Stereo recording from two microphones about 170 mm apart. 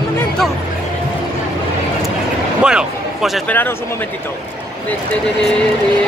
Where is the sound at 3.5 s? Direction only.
10° left (ahead or behind).